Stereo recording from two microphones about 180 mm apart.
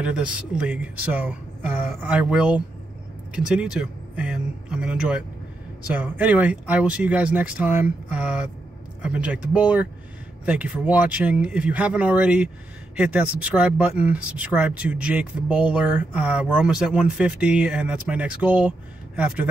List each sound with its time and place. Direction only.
0.0 s speech: 5° right (ahead or behind)